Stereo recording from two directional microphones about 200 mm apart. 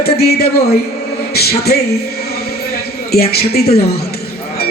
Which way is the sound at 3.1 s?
50° left (ahead or behind).